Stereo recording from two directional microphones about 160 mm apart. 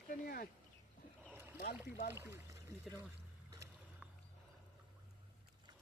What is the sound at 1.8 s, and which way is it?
Speech, 90° left.